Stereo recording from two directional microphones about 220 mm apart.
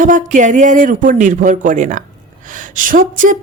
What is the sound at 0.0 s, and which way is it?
Speech, 35° right (ahead or behind).